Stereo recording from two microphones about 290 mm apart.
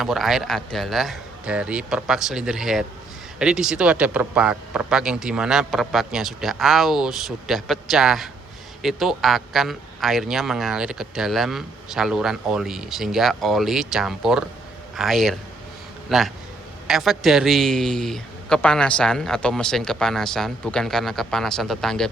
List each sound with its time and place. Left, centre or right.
0.0 s a man's voice: centre